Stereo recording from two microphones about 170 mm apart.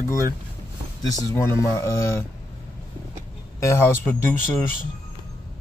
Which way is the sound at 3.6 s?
15° left (ahead or behind).